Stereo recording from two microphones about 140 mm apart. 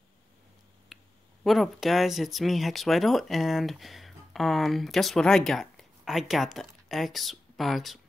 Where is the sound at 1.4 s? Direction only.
Centre (ahead or behind).